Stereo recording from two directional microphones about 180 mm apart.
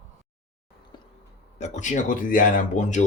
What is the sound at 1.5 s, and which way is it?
Speech, 40° left (ahead or behind).